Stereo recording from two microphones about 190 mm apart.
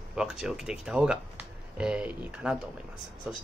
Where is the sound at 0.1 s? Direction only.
5° right (ahead or behind).